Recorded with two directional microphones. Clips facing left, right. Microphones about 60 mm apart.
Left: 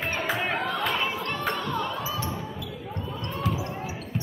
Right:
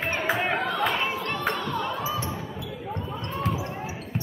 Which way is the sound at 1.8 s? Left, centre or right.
Right.